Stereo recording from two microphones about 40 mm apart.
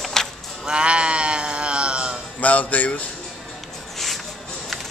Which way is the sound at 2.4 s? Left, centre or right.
Left.